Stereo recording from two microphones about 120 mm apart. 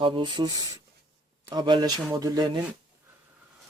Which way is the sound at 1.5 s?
40° right (ahead or behind).